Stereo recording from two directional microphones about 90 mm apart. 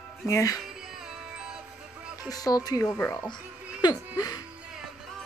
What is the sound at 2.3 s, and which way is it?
Speech, 45° left (ahead or behind).